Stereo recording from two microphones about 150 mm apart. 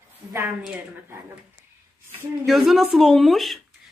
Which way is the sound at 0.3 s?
15° right (ahead or behind).